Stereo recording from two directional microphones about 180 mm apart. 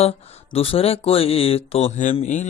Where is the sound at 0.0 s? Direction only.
35° left (ahead or behind).